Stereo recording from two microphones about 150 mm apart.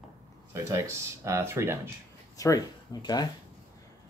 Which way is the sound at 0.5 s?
20° right (ahead or behind).